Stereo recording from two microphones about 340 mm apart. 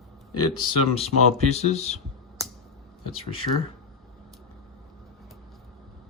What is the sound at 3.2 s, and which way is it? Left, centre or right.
Speech, centre.